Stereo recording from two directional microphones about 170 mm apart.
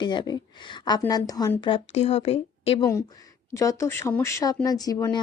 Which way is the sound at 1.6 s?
35° left (ahead or behind).